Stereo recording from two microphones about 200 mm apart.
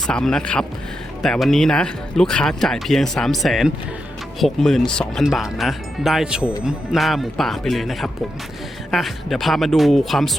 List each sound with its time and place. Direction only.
0.1 s speech: 5° left (ahead or behind)